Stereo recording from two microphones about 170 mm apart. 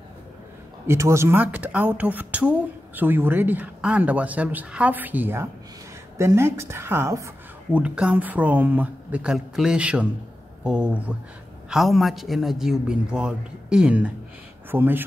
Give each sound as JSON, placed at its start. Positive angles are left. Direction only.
{"t": 0.8, "sound": "speech", "side_deg": -15}